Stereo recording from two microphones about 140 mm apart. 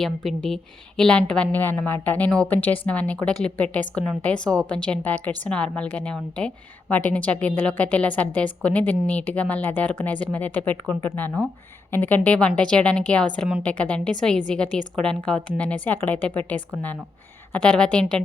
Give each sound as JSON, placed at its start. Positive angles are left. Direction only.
{"t": 0.0, "sound": "speech", "side_deg": 5}